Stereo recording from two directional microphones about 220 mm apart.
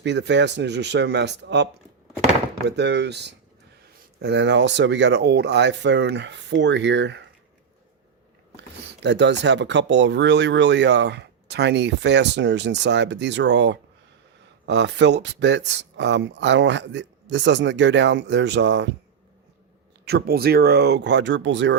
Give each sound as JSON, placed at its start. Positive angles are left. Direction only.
{"t": 0.0, "sound": "speech", "side_deg": -50}
{"t": 2.6, "sound": "speech", "side_deg": -50}
{"t": 9.0, "sound": "speech", "side_deg": -55}
{"t": 20.1, "sound": "speech", "side_deg": -45}